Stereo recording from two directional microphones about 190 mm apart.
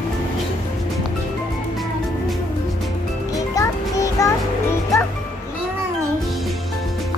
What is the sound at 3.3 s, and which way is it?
Music, 15° left (ahead or behind).